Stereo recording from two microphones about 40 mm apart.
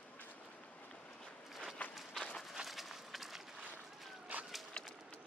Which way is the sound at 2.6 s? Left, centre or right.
Centre.